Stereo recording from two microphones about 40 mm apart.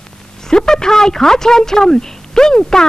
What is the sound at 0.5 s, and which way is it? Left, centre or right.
Speech, centre.